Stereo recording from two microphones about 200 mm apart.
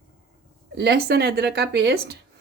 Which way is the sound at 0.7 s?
55° right (ahead or behind).